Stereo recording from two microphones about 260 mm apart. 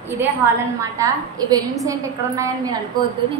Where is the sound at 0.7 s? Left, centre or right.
Centre.